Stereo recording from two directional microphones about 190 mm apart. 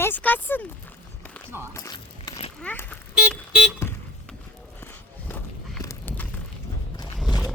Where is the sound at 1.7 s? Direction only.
20° left (ahead or behind).